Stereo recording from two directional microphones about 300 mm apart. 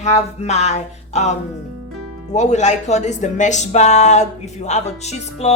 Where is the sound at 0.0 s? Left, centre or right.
Left.